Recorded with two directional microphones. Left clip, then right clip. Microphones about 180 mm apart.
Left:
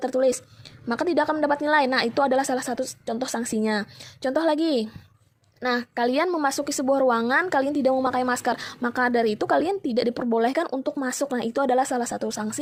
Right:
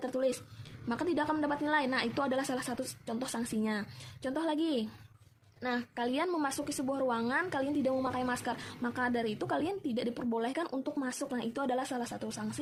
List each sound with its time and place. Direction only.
0.0 s speech: 45° left (ahead or behind)